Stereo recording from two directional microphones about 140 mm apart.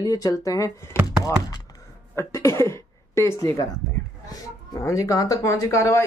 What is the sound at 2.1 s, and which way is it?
Speech, 20° left (ahead or behind).